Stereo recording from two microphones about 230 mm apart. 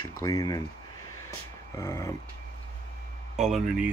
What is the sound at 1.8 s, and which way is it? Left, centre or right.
Speech, centre.